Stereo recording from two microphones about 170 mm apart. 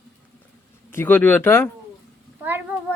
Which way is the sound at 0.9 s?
10° left (ahead or behind).